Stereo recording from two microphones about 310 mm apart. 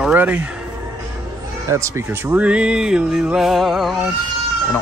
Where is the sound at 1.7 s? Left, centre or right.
Centre.